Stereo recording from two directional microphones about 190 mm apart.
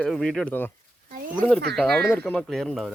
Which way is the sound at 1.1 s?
50° right (ahead or behind).